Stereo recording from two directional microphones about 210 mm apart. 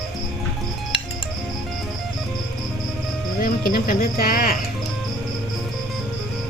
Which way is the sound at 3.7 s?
45° left (ahead or behind).